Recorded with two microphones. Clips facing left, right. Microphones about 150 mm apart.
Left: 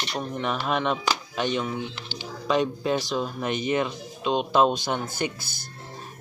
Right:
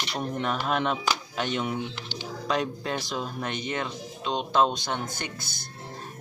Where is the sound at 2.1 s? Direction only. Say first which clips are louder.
Left 4 dB; centre (ahead or behind).